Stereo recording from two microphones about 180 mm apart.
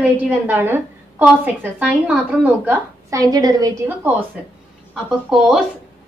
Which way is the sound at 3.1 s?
20° right (ahead or behind).